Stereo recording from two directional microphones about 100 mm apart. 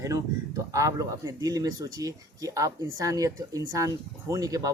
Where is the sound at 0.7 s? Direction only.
35° right (ahead or behind).